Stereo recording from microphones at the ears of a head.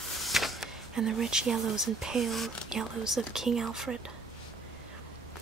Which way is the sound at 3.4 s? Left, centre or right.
Right.